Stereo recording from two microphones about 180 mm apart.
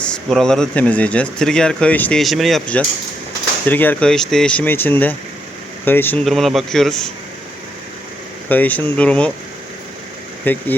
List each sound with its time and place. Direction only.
0.0 s speech: 5° left (ahead or behind)
8.4 s speech: 10° left (ahead or behind)
10.4 s speech: 10° left (ahead or behind)